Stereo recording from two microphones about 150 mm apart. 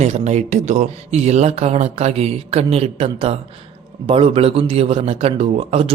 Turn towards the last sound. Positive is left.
turn(degrees=-45)  # may be behind; listen again after turning